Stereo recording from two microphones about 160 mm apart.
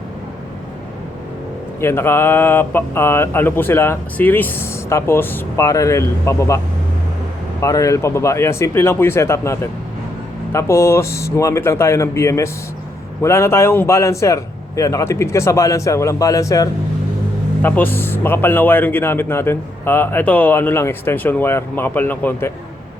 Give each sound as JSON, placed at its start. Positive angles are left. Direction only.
{"t": 1.8, "sound": "speech", "side_deg": 15}
{"t": 7.6, "sound": "a man's voice", "side_deg": 20}